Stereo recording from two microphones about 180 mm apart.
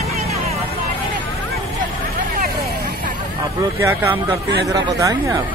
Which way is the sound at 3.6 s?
15° right (ahead or behind).